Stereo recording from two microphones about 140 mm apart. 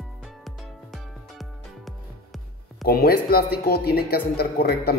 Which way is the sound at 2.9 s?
90° left.